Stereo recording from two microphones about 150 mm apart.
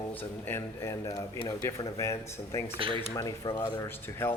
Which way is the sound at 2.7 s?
35° right (ahead or behind).